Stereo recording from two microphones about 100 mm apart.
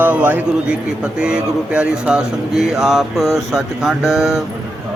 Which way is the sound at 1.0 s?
10° right (ahead or behind).